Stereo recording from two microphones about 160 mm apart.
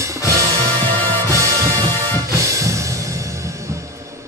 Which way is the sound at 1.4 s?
20° right (ahead or behind).